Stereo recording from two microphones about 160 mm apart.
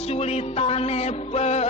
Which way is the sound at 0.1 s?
40° left (ahead or behind).